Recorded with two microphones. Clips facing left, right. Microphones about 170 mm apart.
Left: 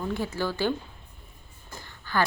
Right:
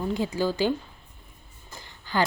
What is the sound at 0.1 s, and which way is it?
Speech, 15° right (ahead or behind).